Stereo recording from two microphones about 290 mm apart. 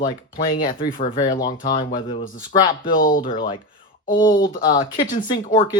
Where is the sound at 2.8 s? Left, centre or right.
Left.